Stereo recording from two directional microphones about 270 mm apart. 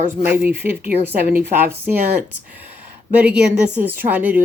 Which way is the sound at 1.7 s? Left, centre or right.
Centre.